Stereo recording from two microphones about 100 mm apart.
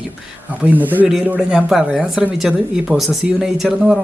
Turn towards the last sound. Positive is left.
turn(degrees=-5)  # may be behind; listen again after turning